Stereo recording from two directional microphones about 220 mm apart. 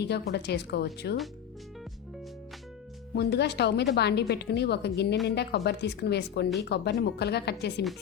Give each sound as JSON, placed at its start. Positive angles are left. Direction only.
{"t": 0.0, "sound": "a woman's voice", "side_deg": 50}
{"t": 3.2, "sound": "a woman's voice", "side_deg": 50}